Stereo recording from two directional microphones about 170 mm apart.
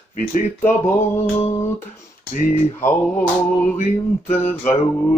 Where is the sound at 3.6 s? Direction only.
45° left (ahead or behind).